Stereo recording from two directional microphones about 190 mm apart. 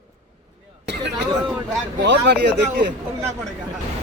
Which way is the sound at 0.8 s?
65° right (ahead or behind).